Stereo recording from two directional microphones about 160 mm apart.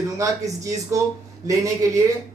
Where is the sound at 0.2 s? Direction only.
20° right (ahead or behind).